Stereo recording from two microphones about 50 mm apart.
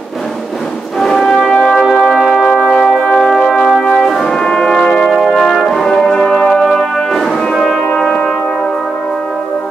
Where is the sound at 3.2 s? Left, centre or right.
Centre.